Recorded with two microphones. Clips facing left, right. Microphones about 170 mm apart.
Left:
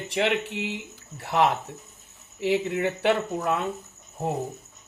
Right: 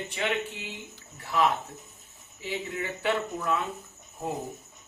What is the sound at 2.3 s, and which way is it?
Speech, 70° left (ahead or behind).